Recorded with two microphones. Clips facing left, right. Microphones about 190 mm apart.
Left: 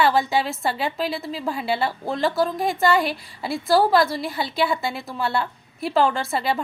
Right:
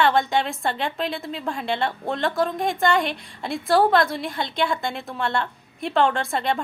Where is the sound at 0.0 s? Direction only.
5° left (ahead or behind).